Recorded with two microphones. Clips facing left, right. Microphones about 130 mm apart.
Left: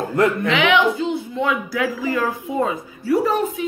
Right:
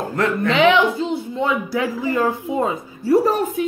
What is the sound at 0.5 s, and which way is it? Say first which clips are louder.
Speech: right 2 dB; 35° right (ahead or behind).